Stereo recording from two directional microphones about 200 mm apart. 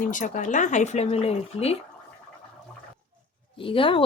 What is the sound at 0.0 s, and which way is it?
Speech, 40° left (ahead or behind).